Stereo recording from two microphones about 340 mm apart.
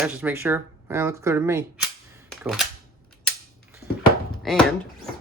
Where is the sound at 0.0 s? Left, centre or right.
Centre.